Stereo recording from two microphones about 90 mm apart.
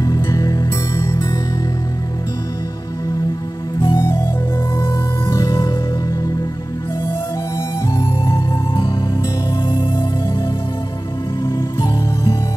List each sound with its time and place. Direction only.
0.0 s music: 40° left (ahead or behind)
3.9 s music: 35° left (ahead or behind)
5.3 s music: 40° left (ahead or behind)
8.0 s music: 45° left (ahead or behind)
11.4 s music: 50° left (ahead or behind)